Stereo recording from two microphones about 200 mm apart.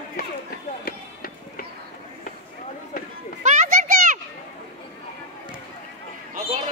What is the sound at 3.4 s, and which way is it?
Children playing, 35° right (ahead or behind).